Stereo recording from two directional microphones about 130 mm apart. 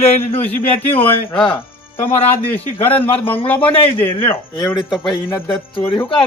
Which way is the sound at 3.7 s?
45° left (ahead or behind).